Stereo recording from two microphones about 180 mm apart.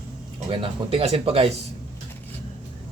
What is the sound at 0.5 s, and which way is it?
Speech, 30° right (ahead or behind).